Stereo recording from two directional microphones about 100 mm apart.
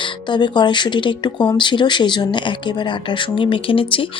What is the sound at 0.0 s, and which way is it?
Speech, 50° left (ahead or behind).